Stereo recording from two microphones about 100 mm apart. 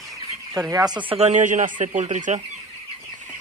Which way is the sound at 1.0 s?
90° right.